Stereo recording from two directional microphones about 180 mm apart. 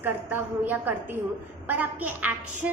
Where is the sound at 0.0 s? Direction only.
10° right (ahead or behind).